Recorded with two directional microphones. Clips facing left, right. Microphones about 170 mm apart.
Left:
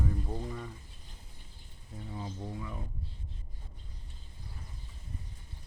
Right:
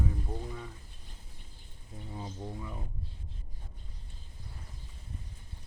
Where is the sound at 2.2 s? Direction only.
15° right (ahead or behind).